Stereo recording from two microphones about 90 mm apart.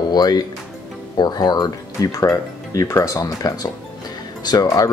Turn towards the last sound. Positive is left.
turn(degrees=40)  # may be behind; listen again after turning